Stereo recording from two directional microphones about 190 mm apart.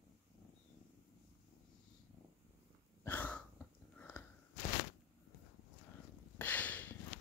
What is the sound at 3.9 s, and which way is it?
Biting, 10° left (ahead or behind).